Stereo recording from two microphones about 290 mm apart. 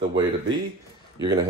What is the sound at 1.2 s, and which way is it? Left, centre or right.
Speech, centre.